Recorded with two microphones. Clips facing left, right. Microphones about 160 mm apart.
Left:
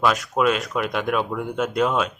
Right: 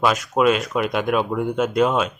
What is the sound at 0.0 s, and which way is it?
Speech, centre (ahead or behind).